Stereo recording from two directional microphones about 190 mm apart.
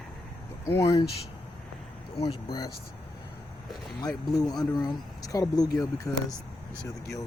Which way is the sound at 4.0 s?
20° left (ahead or behind).